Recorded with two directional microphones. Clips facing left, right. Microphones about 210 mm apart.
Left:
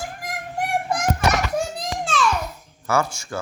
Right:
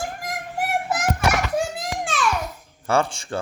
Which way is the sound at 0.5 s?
5° right (ahead or behind).